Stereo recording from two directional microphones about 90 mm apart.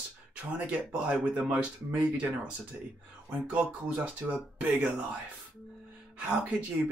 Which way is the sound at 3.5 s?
15° right (ahead or behind).